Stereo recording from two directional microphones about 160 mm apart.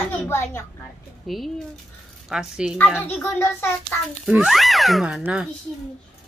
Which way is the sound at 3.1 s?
15° left (ahead or behind).